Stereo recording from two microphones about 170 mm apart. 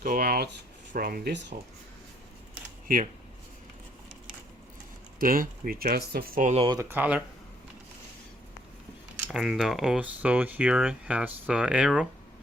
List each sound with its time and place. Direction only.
0.0 s a sound: 60° right (ahead or behind)
0.9 s speech: 60° right (ahead or behind); by 1.5 s 80° right
2.8 s speech: 55° right (ahead or behind)
5.2 s speech: 55° right (ahead or behind)
6.7 s speech: 15° right (ahead or behind)
9.2 s speech: centre (ahead or behind)